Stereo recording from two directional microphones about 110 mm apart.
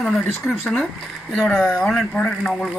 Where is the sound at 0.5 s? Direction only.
10° left (ahead or behind).